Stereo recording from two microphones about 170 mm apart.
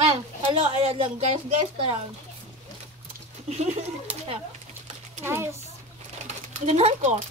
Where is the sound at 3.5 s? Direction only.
40° right (ahead or behind).